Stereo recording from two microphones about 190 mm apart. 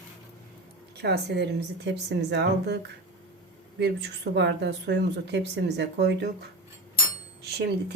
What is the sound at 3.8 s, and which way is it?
Speech, 65° right (ahead or behind).